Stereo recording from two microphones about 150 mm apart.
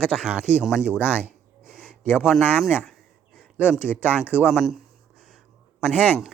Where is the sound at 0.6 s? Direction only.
5° right (ahead or behind).